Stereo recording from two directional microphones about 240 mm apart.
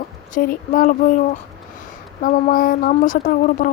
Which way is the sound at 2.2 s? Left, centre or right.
Left.